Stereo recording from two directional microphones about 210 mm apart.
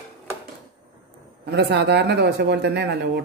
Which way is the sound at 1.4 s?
50° right (ahead or behind).